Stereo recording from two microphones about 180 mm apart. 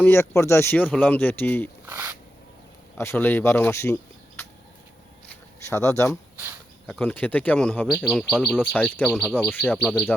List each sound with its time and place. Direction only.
0.0 s speech: 15° left (ahead or behind)
1.9 s speech: 15° right (ahead or behind)
3.0 s speech: 10° left (ahead or behind)
5.3 s a sound: 15° left (ahead or behind)
6.8 s speech: 5° left (ahead or behind)